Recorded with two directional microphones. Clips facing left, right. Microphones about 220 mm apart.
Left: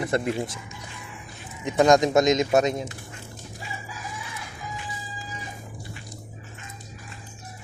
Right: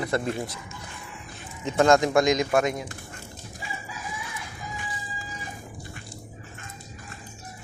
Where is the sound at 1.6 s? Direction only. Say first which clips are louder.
Left 1 dB; 15° left (ahead or behind).